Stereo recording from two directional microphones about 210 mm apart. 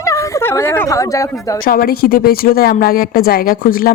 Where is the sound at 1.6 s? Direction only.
45° left (ahead or behind).